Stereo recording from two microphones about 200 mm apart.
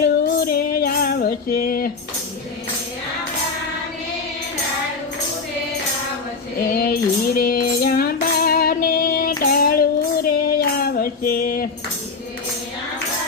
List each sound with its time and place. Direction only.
0.0 s music: 50° left (ahead or behind)
6.6 s music: 50° left (ahead or behind)
9.4 s child singing: 50° left (ahead or behind)